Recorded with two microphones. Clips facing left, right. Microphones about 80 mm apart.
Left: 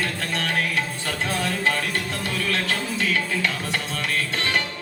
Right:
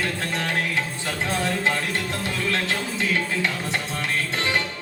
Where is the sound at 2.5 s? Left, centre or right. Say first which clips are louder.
Even; right.